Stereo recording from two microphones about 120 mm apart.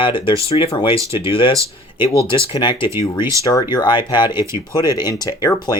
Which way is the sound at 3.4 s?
30° left (ahead or behind).